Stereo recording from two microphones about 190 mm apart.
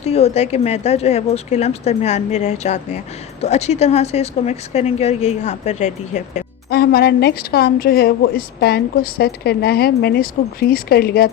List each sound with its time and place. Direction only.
0.0 s a woman's voice: 35° left (ahead or behind)
6.7 s a woman's voice: 55° left (ahead or behind)